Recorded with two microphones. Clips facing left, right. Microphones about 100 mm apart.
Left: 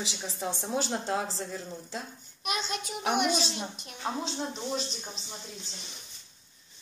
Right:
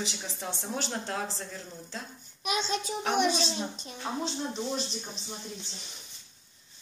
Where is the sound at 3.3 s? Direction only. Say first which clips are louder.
Right 1 dB; 10° left (ahead or behind).